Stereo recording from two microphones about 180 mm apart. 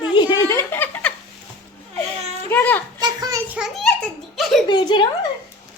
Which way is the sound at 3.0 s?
20° right (ahead or behind).